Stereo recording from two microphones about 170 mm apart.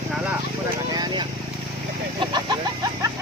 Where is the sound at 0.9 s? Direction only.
25° right (ahead or behind).